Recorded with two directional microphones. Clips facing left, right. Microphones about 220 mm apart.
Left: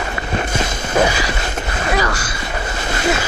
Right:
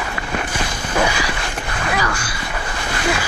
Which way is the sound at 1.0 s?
40° left (ahead or behind).